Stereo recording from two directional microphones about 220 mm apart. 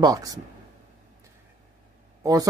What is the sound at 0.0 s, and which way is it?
Speech, 15° right (ahead or behind).